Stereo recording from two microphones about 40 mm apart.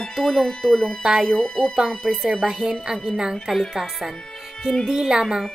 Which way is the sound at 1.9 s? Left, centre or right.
Centre.